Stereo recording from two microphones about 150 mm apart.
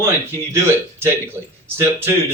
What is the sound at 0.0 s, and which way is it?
Speech, 15° right (ahead or behind).